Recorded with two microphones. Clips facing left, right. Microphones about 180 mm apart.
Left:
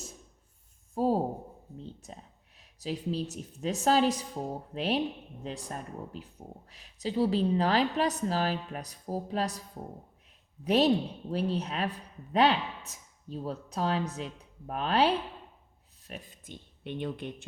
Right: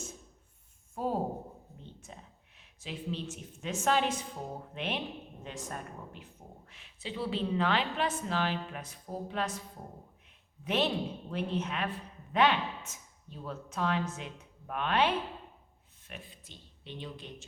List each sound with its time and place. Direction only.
0.9 s speech: 35° left (ahead or behind); by 17.3 s 55° left (ahead or behind)